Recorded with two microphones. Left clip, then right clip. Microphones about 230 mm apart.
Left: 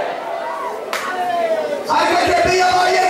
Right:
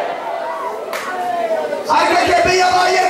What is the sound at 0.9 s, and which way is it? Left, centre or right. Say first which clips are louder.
Clapping: left 2 dB; centre.